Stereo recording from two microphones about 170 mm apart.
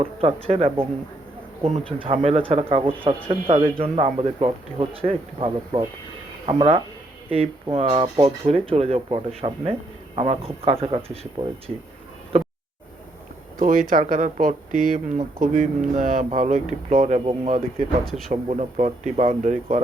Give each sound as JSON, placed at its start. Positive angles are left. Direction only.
{"t": 0.0, "sound": "speech", "side_deg": -35}
{"t": 2.0, "sound": "speech", "side_deg": -35}
{"t": 12.3, "sound": "a sound", "side_deg": -35}
{"t": 13.6, "sound": "speech", "side_deg": -50}
{"t": 18.0, "sound": "speech", "side_deg": 0}
{"t": 18.3, "sound": "speech", "side_deg": -40}